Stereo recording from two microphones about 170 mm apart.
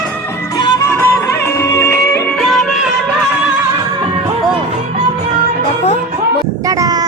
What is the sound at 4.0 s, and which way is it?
Music, 35° right (ahead or behind).